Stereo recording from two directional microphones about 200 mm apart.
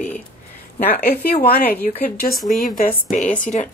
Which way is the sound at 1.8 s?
40° left (ahead or behind).